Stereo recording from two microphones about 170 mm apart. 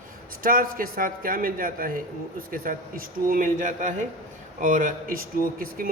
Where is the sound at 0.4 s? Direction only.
55° right (ahead or behind).